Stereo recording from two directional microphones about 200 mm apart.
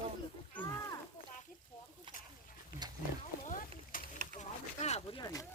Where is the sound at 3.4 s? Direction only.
40° left (ahead or behind).